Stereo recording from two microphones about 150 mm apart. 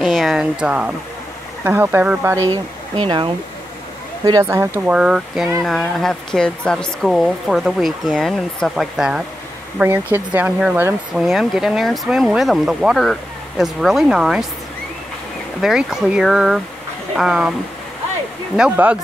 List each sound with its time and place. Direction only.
0.0 s speech: centre (ahead or behind)
2.5 s speech: 30° right (ahead or behind); by 11.2 s 15° right (ahead or behind)
11.2 s speech: 5° right (ahead or behind)
15.6 s speech: 5° right (ahead or behind)
18.6 s speech: 10° right (ahead or behind)